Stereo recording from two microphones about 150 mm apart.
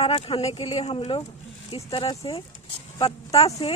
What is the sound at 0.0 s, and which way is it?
Speech, 40° left (ahead or behind).